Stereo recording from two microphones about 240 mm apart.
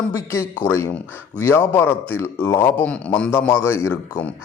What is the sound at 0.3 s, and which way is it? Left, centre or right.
A man's voice, centre.